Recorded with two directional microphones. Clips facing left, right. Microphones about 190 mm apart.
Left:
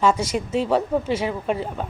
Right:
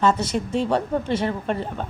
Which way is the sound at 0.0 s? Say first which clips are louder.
Even; 10° left (ahead or behind).